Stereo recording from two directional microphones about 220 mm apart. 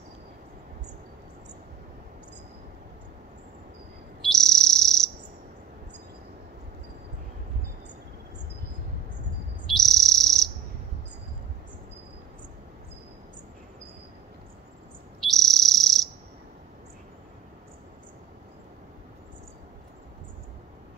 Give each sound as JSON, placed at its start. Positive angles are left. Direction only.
{"t": 4.2, "sound": "bird", "side_deg": 0}
{"t": 9.8, "sound": "bird", "side_deg": 0}
{"t": 15.1, "sound": "frog", "side_deg": 0}